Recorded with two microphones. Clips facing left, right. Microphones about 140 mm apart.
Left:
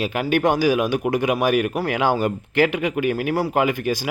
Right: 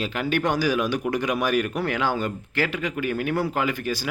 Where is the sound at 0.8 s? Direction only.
55° left (ahead or behind).